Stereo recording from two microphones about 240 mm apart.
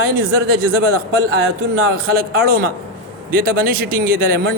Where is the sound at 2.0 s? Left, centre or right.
Right.